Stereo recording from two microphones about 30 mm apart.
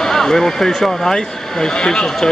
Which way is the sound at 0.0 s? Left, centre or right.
Centre.